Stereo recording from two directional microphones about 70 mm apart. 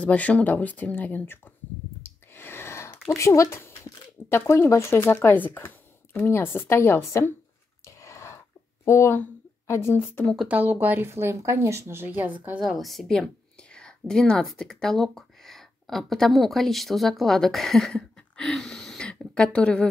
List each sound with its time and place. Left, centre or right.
0.0 s speech: centre
2.0 s a sound: left
4.4 s speech: left
7.8 s a sound: left
8.8 s speech: left
10.5 s a woman's voice: right
12.5 s a woman's voice: centre
13.6 s a woman's voice: centre